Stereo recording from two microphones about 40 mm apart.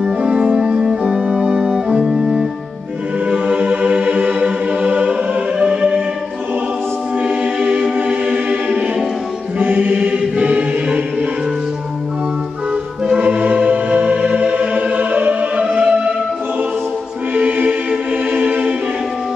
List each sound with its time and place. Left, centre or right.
0.2 s music: right
0.6 s music: centre
3.3 s music: right
5.6 s music: right
7.2 s music: right
9.6 s music: right
9.9 s choir: right
13.2 s choir: right
15.6 s music: right
17.4 s choir: right